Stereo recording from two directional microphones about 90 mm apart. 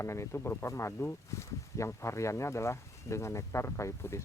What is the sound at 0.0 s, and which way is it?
Speech, 30° left (ahead or behind).